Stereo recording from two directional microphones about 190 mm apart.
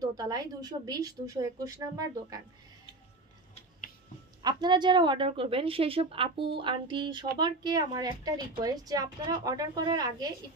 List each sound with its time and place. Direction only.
0.0 s a woman's voice: 20° right (ahead or behind)
4.4 s a woman's voice: 20° right (ahead or behind)